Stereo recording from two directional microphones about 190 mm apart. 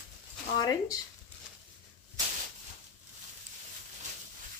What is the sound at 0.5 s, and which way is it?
Speech, 20° left (ahead or behind).